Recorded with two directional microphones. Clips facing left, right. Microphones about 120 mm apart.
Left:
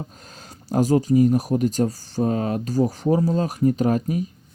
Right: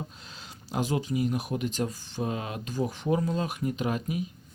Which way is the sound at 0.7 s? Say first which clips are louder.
Left 11 dB; 40° left (ahead or behind).